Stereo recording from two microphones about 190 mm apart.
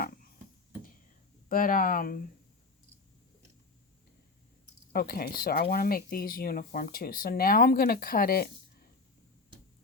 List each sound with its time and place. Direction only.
0.0 s a sound: 50° left (ahead or behind)
1.5 s speech: 45° left (ahead or behind)
4.9 s speech: 50° left (ahead or behind)